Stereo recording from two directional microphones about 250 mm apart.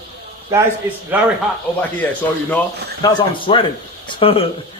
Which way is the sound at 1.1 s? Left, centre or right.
Centre.